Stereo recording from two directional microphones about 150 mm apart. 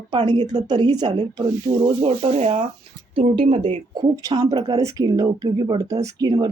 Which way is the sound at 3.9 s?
30° right (ahead or behind).